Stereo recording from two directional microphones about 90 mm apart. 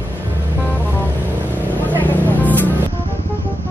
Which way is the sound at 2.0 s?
20° left (ahead or behind).